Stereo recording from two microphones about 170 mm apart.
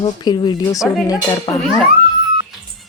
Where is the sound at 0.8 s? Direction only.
Centre (ahead or behind).